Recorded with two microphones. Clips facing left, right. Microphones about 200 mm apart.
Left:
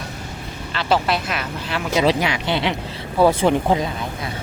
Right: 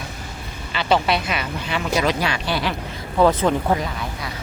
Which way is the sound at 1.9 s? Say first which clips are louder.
Left 3 dB; 20° left (ahead or behind).